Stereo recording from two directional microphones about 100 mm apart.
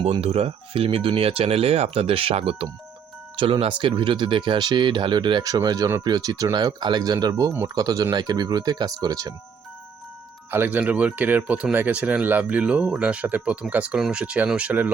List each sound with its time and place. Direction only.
0.0 s speech: 80° right
3.3 s speech: 60° right (ahead or behind); by 9.3 s 35° right (ahead or behind)
10.5 s speech: 20° right (ahead or behind)